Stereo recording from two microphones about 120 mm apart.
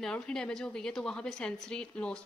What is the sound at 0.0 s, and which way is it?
A woman's voice, 5° left (ahead or behind).